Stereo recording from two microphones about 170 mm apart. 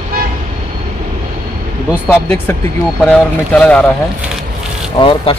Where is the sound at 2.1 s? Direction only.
10° left (ahead or behind).